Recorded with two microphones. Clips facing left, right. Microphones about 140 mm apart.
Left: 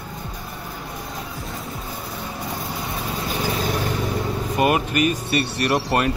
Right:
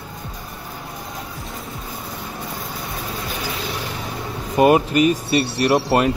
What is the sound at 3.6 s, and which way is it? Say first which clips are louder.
Vehicle: left 4 dB; 45° left (ahead or behind).